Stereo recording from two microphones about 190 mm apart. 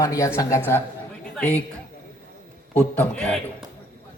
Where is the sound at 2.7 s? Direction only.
10° left (ahead or behind).